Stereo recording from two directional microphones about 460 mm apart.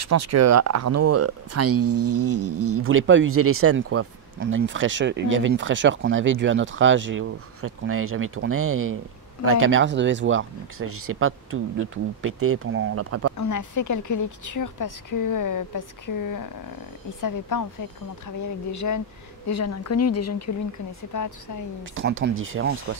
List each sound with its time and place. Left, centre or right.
0.0 s speech: right
13.4 s a woman's voice: left
21.9 s speech: right